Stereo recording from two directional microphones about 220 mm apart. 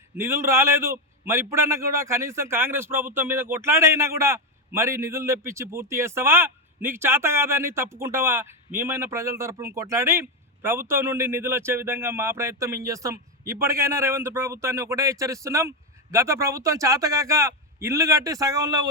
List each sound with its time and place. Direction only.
0.2 s a man's voice: 10° right (ahead or behind)